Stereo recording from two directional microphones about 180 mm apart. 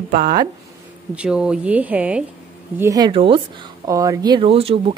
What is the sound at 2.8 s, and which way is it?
Speech, 20° right (ahead or behind).